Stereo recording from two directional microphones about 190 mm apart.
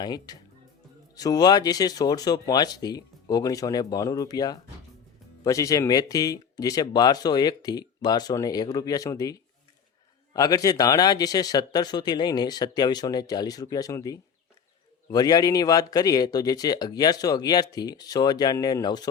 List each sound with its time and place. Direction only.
0.0 s speech: 20° left (ahead or behind)